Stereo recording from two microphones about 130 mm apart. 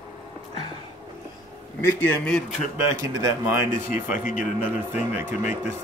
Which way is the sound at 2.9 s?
30° right (ahead or behind).